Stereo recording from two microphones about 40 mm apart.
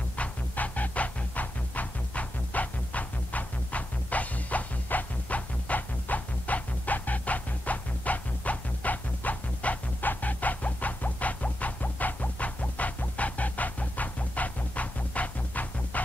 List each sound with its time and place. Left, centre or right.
0.1 s music: left